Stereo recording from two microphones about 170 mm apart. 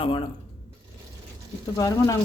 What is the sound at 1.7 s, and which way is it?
Speech, 20° left (ahead or behind).